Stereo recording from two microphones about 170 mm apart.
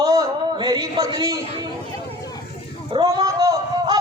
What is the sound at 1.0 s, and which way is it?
Speech, 20° right (ahead or behind).